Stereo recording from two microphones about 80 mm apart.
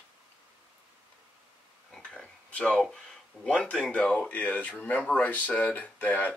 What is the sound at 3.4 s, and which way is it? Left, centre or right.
Speech, centre.